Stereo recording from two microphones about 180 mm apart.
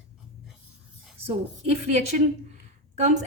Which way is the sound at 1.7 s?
40° right (ahead or behind).